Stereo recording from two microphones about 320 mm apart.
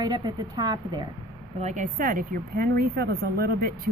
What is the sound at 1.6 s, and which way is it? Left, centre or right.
A woman's voice, right.